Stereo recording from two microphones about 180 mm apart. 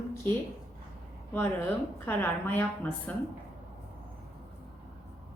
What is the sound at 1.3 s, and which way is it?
A woman's voice, 10° left (ahead or behind).